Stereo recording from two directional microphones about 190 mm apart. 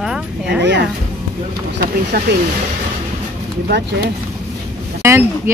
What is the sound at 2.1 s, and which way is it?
Speech, 55° right (ahead or behind).